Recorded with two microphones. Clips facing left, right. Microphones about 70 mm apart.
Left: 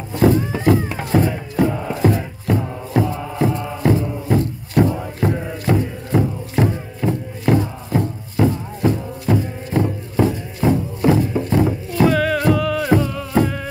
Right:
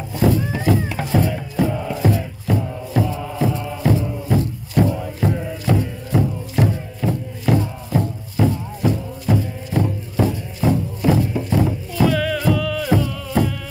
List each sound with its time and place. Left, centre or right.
0.3 s music: left
6.6 s music: left